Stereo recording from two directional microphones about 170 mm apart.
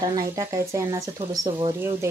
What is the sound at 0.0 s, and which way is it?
Speech, 20° right (ahead or behind).